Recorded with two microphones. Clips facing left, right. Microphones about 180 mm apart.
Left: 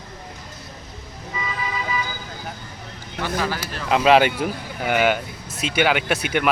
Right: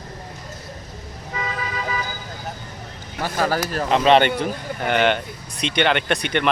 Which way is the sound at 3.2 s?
45° right (ahead or behind).